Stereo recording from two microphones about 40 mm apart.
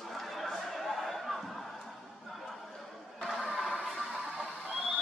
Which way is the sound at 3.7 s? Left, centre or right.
Centre.